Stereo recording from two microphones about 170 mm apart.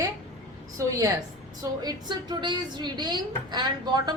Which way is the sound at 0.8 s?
20° right (ahead or behind).